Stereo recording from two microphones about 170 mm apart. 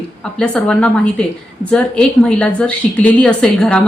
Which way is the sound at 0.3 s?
5° left (ahead or behind).